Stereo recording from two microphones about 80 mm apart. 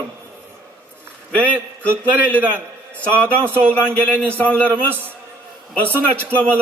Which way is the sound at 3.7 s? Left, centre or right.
Centre.